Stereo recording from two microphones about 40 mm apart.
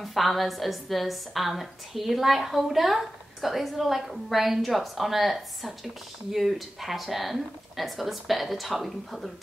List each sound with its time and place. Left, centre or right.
0.0 s a woman's voice: centre